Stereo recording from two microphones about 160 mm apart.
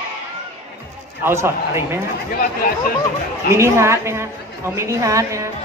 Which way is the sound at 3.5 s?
15° right (ahead or behind).